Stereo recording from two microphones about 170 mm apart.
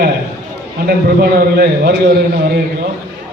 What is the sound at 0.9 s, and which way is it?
A man's voice, 60° right (ahead or behind).